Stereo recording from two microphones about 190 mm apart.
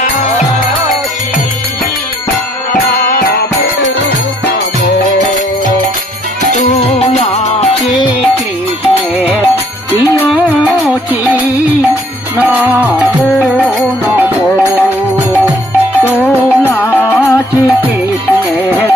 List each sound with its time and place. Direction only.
2.7 s music: 50° left (ahead or behind)
6.7 s music: 35° left (ahead or behind)
12.4 s music: 10° right (ahead or behind)
16.6 s music: 10° left (ahead or behind)